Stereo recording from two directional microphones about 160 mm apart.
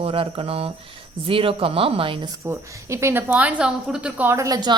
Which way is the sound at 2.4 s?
20° right (ahead or behind).